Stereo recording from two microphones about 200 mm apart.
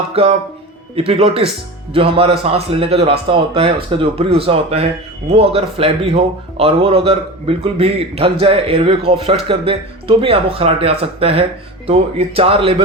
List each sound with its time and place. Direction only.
0.1 s a man's voice: 30° right (ahead or behind)